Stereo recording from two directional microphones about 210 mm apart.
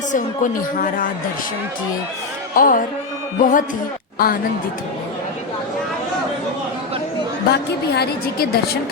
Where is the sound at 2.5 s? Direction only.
40° left (ahead or behind).